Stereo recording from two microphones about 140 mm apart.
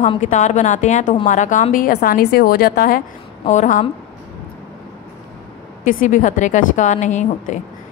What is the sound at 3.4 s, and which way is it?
Speech, 65° left (ahead or behind).